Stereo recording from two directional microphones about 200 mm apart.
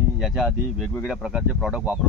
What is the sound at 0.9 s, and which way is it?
Speech, centre (ahead or behind).